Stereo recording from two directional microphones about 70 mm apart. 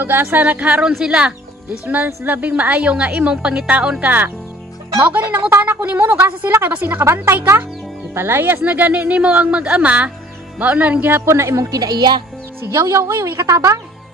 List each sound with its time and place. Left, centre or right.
0.0 s a woman's voice: right; by 1.3 s centre
2.2 s a woman's voice: right
8.1 s a woman's voice: right
11.7 s speech: right
12.6 s speech: right
13.0 s speech: right
13.5 s speech: right